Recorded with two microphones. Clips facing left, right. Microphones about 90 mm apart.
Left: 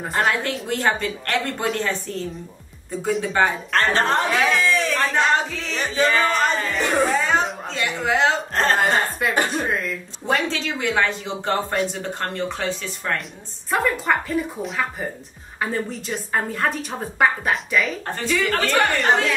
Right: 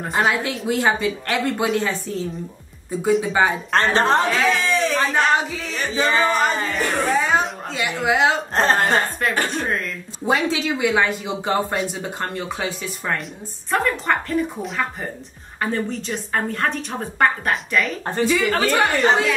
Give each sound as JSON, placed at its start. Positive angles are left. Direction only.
{"t": 0.0, "sound": "a woman's voice", "side_deg": 0}
{"t": 3.7, "sound": "a woman's voice", "side_deg": -20}
{"t": 4.3, "sound": "speech", "side_deg": 20}
{"t": 4.6, "sound": "a woman's voice", "side_deg": -5}
{"t": 10.2, "sound": "speech", "side_deg": -10}
{"t": 13.7, "sound": "a woman's voice", "side_deg": 0}